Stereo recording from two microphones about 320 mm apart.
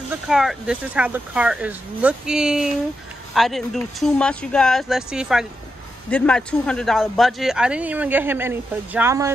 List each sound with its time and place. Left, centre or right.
0.1 s speech: centre